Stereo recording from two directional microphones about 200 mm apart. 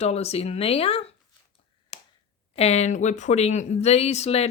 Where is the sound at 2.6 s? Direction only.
35° left (ahead or behind).